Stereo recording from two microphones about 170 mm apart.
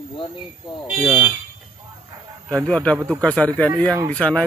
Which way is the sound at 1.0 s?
10° right (ahead or behind).